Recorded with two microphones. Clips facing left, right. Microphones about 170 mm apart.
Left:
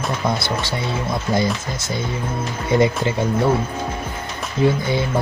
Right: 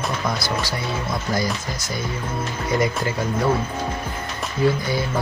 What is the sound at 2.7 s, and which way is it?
Speech, 25° left (ahead or behind).